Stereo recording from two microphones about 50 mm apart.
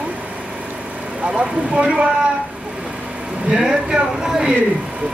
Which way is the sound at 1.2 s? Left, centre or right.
Right.